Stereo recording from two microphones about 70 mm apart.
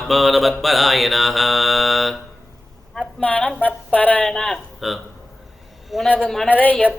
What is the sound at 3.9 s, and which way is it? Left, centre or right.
Speech, left.